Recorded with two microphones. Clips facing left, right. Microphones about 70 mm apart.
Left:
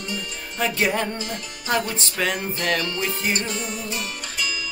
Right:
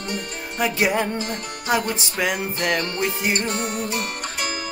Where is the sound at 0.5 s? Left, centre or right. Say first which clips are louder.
Right 2 dB; centre.